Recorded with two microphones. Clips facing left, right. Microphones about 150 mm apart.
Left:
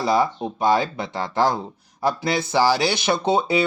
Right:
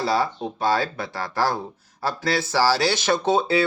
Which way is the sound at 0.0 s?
15° left (ahead or behind).